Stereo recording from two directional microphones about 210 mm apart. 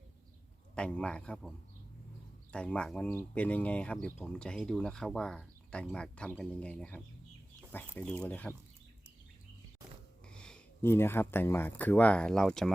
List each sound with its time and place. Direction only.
0.8 s speech: 5° left (ahead or behind)
10.3 s speech: 5° left (ahead or behind)